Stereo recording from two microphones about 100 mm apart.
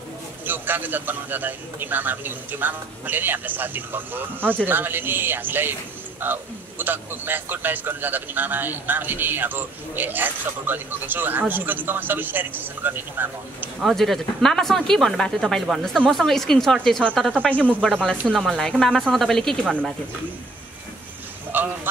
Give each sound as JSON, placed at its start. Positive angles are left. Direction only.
{"t": 0.5, "sound": "a man's voice", "side_deg": -20}
{"t": 13.7, "sound": "speech", "side_deg": 0}
{"t": 19.6, "sound": "speech", "side_deg": -15}
{"t": 21.5, "sound": "a sound", "side_deg": -20}